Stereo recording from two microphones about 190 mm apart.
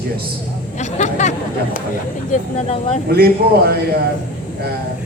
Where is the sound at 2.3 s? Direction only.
35° left (ahead or behind).